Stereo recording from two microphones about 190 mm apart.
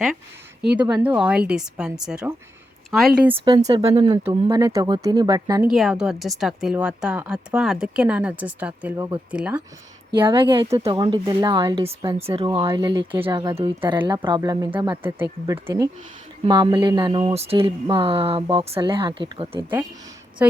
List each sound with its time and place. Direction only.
0.9 s a woman's voice: 5° right (ahead or behind)
3.3 s speech: 20° right (ahead or behind)
3.6 s speech: 35° right (ahead or behind)
4.3 s speech: 15° right (ahead or behind)
5.7 s a woman's voice: 5° right (ahead or behind)
10.2 s speech: 25° right (ahead or behind)